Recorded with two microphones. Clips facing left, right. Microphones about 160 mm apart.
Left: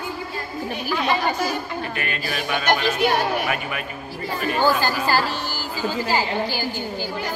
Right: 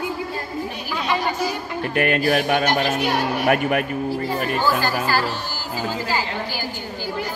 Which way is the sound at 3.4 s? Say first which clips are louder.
Right 8 dB; 55° right (ahead or behind).